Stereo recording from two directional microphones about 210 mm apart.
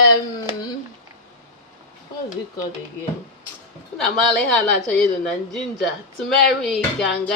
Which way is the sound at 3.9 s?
Centre (ahead or behind).